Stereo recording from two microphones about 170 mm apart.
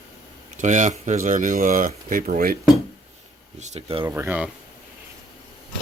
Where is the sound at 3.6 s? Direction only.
40° right (ahead or behind).